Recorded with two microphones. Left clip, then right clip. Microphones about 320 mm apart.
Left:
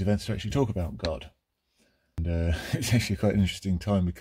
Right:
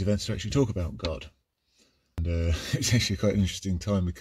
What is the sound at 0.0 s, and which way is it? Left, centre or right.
Speech, left.